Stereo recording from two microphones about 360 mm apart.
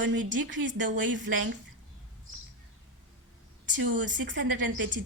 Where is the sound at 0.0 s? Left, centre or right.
Right.